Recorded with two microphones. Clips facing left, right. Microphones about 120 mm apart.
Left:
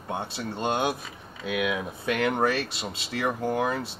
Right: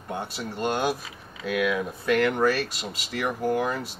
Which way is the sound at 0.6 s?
25° left (ahead or behind).